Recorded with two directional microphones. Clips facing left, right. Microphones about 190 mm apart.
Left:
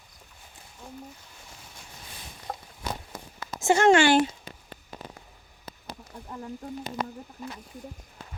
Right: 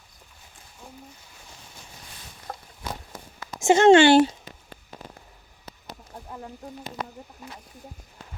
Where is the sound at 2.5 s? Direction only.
10° left (ahead or behind).